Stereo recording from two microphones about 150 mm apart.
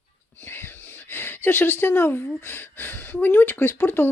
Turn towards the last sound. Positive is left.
turn(degrees=15)  # may be behind; listen again after turning